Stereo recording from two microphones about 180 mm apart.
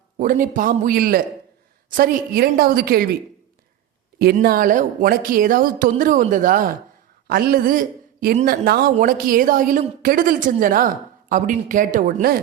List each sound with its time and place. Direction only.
0.2 s a man's voice: 50° right (ahead or behind)
4.2 s a man's voice: 55° right (ahead or behind)